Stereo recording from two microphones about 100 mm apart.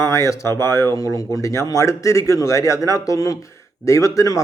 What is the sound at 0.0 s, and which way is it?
Speech, 30° left (ahead or behind).